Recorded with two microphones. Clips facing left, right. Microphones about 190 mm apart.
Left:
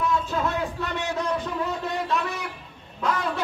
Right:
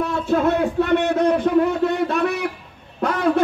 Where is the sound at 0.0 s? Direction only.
60° right (ahead or behind).